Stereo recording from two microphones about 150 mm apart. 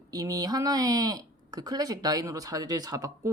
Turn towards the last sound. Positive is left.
turn(degrees=-25)  # may be behind; listen again after turning